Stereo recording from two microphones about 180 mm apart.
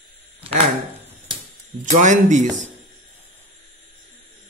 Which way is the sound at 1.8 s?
40° right (ahead or behind).